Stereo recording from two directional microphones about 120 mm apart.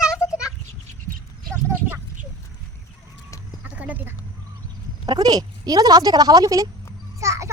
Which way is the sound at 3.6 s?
10° right (ahead or behind).